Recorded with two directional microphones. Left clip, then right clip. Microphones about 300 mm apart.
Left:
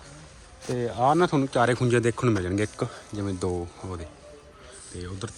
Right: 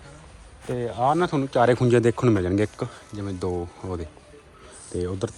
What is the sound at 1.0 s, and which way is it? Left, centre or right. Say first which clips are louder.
Speech: even; centre.